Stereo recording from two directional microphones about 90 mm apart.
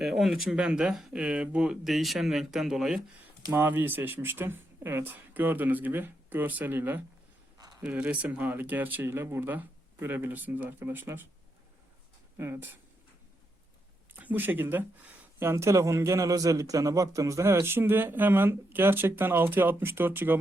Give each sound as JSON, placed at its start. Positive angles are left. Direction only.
{"t": 0.0, "sound": "speech", "side_deg": -5}
{"t": 3.5, "sound": "a man's voice", "side_deg": -20}
{"t": 12.4, "sound": "a man's voice", "side_deg": -25}
{"t": 14.1, "sound": "a man's voice", "side_deg": -20}